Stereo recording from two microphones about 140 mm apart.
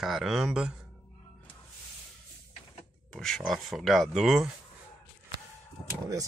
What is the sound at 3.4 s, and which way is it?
Speech, centre (ahead or behind).